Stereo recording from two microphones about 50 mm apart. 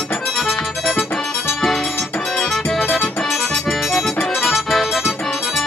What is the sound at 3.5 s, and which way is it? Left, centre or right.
Accordion, centre.